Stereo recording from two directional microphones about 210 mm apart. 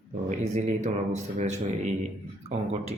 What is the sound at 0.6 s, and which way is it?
Speech, 35° right (ahead or behind).